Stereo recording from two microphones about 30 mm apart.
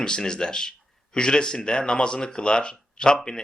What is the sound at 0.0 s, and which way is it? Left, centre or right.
Speech, left.